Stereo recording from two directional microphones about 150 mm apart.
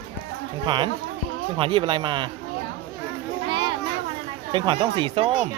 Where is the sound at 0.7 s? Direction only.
30° right (ahead or behind).